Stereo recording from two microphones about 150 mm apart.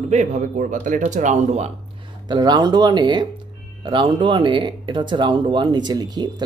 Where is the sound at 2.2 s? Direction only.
30° right (ahead or behind).